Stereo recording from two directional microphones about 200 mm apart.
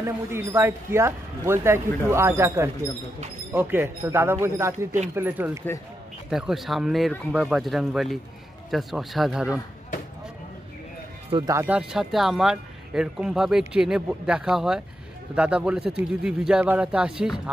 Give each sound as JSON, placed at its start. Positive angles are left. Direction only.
{"t": 0.0, "sound": "speech", "side_deg": -10}
{"t": 11.2, "sound": "speech", "side_deg": -25}
{"t": 11.5, "sound": "speech", "side_deg": -10}